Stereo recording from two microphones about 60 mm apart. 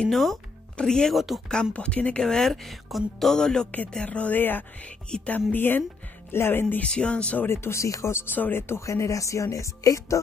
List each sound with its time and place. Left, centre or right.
0.0 s speech: centre
1.1 s speech: centre
1.7 s speech: left
2.2 s speech: centre
4.0 s speech: left
4.4 s speech: left
4.8 s speech: left
5.5 s speech: left
6.8 s speech: centre
7.4 s speech: left